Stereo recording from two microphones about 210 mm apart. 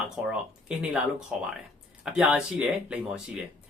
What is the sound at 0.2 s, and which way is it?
Speech, 5° right (ahead or behind).